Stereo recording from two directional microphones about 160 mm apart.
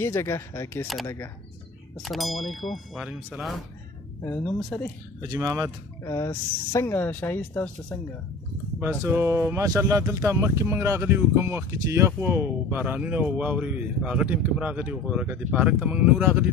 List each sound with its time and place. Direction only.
0.0 s speech: 15° left (ahead or behind)
2.0 s speech: centre (ahead or behind)
4.2 s speech: 15° left (ahead or behind)
5.2 s speech: 20° right (ahead or behind)
6.0 s speech: 20° left (ahead or behind)
9.0 s speech: 15° right (ahead or behind)